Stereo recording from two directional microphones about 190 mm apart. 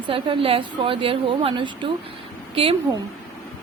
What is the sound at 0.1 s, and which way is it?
Speech, 30° right (ahead or behind).